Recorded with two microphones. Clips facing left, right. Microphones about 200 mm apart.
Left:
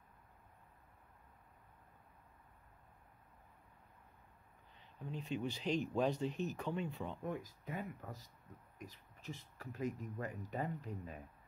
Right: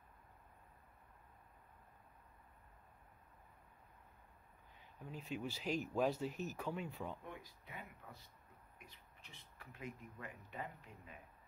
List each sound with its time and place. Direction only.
4.7 s speech: 5° right (ahead or behind)
7.2 s speech: 45° left (ahead or behind)